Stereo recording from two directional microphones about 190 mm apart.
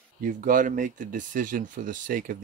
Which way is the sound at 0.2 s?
45° right (ahead or behind).